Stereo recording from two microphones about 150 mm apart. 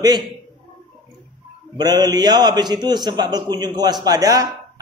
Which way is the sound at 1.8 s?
25° right (ahead or behind).